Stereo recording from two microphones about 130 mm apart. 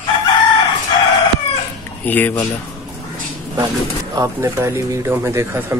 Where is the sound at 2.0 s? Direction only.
15° left (ahead or behind).